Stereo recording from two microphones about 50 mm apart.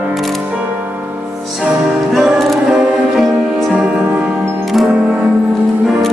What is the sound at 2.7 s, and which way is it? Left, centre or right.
Music, centre.